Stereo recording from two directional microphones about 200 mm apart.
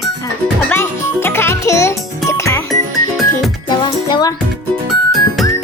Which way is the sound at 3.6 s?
20° left (ahead or behind).